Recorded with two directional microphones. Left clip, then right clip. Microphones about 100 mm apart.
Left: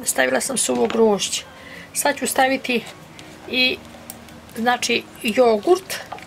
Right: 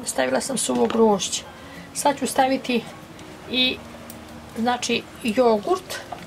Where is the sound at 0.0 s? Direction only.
40° left (ahead or behind).